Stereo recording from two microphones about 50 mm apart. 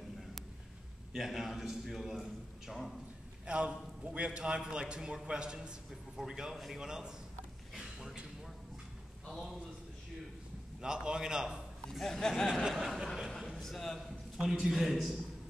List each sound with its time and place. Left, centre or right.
1.1 s a man's voice: centre
3.4 s a man's voice: right
7.7 s a sound: centre
9.3 s a man's voice: centre
10.8 s a man's voice: centre
12.0 s speech: centre
12.6 s a man's voice: centre
13.4 s a sound: centre
14.4 s a man's voice: centre